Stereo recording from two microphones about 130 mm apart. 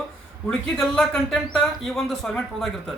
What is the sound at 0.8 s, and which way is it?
Speech, 5° left (ahead or behind).